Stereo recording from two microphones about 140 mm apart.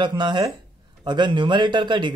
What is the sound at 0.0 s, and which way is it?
Speech, 35° right (ahead or behind).